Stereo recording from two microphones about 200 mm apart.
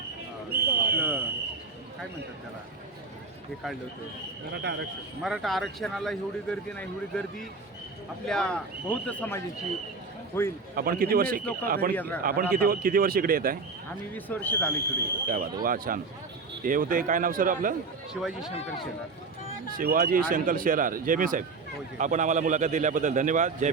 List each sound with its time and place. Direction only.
0.5 s a sound: 50° right (ahead or behind)
0.9 s a sound: 10° right (ahead or behind)
4.5 s speech: 60° right (ahead or behind)
5.2 s a man's voice: centre (ahead or behind)
8.3 s a man's voice: 5° left (ahead or behind)
10.8 s speech: 45° right (ahead or behind)
11.9 s speech: 10° left (ahead or behind)
12.2 s speech: 45° right (ahead or behind)
14.1 s speech: 10° left (ahead or behind)
15.6 s speech: 45° right (ahead or behind)
18.1 s a man's voice: centre (ahead or behind)
19.7 s a man's voice: 45° right (ahead or behind)